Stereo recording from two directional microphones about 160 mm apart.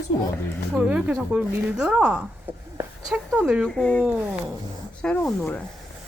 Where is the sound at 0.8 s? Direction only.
10° right (ahead or behind).